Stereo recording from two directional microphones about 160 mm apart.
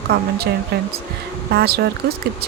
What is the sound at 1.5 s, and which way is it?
Speech, 85° right.